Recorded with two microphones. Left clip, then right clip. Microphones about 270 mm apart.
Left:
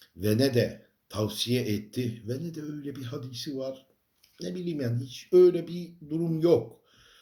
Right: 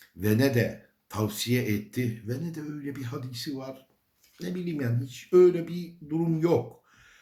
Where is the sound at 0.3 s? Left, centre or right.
Right.